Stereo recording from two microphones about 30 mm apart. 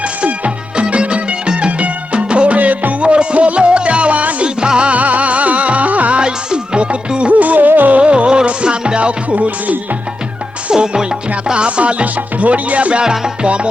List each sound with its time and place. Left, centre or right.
0.8 s music: right
2.6 s music: right
3.0 s music: right
4.4 s music: right
4.9 s music: right
6.1 s music: right
7.3 s music: right
8.0 s music: right
8.6 s music: right
9.0 s music: right
10.7 s music: right
11.5 s music: right
12.0 s music: right
12.9 s music: right